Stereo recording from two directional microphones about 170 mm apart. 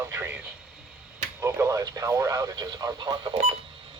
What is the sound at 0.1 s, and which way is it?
Radio, 10° right (ahead or behind).